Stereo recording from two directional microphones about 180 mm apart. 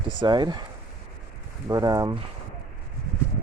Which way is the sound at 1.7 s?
20° right (ahead or behind).